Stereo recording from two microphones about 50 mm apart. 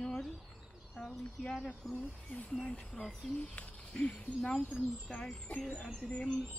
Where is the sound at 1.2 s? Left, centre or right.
Centre.